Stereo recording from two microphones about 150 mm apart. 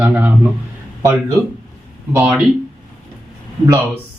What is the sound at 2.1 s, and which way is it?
Speech, 10° right (ahead or behind).